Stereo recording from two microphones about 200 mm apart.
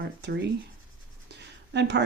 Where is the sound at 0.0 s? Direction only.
60° right (ahead or behind).